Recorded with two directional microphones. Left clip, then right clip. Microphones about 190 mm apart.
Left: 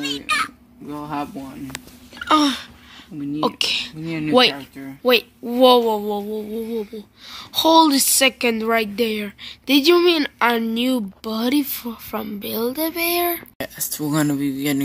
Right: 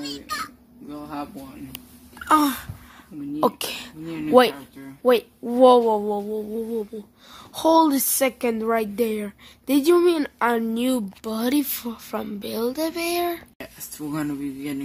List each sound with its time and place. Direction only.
0.8 s speech: 40° left (ahead or behind)
2.1 s a sound: 5° left (ahead or behind)
3.3 s speech: 15° right (ahead or behind)
13.6 s speech: 50° left (ahead or behind)